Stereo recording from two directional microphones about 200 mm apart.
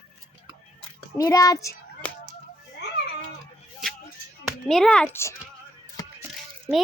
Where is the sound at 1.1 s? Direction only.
15° left (ahead or behind).